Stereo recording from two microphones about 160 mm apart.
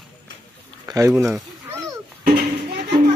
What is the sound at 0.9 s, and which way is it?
Speech, 20° right (ahead or behind).